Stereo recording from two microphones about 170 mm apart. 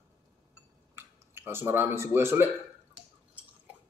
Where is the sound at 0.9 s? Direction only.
15° right (ahead or behind).